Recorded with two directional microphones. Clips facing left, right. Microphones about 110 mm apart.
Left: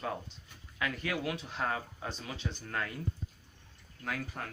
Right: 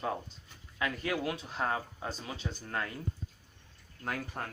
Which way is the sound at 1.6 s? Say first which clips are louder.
Right 3 dB; 25° right (ahead or behind).